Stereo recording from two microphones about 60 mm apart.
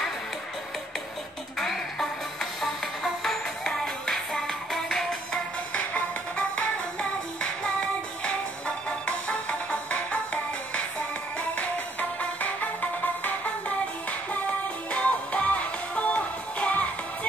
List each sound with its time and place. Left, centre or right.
1.6 s music: centre
5.8 s music: left
8.2 s music: centre
11.5 s music: left
14.9 s music: left